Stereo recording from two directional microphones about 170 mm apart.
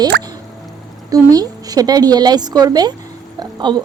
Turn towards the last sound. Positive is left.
turn(degrees=-25)  # may be behind; listen again after turning